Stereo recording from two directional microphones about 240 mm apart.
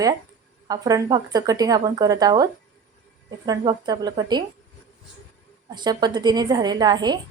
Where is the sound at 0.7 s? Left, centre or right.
Centre.